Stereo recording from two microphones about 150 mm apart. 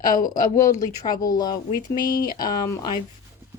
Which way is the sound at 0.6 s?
20° left (ahead or behind).